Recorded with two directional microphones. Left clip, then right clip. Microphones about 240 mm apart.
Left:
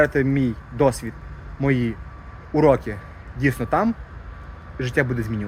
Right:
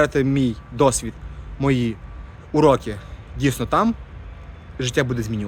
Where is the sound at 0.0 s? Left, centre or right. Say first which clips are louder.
Even; right.